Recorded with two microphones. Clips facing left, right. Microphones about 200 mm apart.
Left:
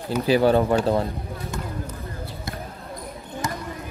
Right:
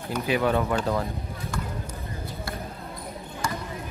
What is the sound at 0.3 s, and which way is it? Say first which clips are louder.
Speech: left 6 dB; 30° left (ahead or behind).